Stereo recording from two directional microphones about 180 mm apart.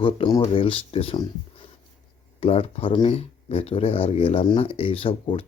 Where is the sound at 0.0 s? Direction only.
25° left (ahead or behind).